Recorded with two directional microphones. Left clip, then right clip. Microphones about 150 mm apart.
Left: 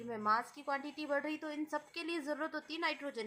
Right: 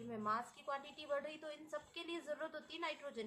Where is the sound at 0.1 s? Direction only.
40° left (ahead or behind).